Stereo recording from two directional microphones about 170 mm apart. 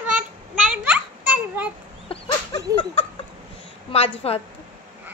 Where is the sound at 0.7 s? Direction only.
5° right (ahead or behind).